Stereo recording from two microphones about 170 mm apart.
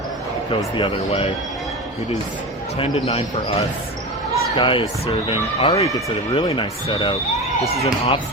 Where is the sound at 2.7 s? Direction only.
35° left (ahead or behind).